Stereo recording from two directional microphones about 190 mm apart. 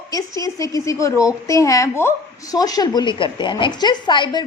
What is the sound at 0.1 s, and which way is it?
A woman's voice, 20° left (ahead or behind).